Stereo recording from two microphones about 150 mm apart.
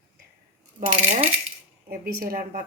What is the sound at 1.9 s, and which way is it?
Speech, 75° right (ahead or behind).